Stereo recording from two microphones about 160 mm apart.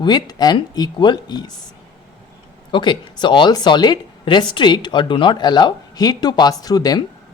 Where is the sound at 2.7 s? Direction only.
30° left (ahead or behind).